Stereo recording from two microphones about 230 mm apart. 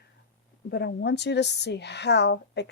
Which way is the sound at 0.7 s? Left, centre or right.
Left.